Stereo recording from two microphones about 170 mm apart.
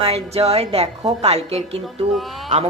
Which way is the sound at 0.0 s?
35° right (ahead or behind).